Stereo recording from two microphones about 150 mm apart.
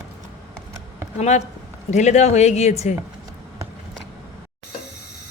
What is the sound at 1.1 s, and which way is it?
Speech, 50° left (ahead or behind).